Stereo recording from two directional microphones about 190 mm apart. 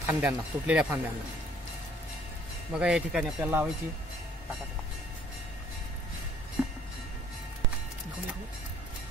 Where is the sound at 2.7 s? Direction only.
5° right (ahead or behind).